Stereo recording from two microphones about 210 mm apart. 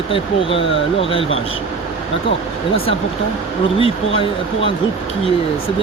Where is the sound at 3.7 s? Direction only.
25° left (ahead or behind).